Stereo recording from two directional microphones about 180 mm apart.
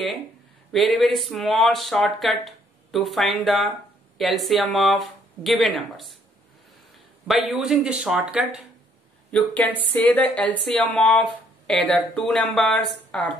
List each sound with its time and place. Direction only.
0.7 s speech: centre (ahead or behind)
7.2 s speech: centre (ahead or behind)
9.3 s speech: 5° left (ahead or behind)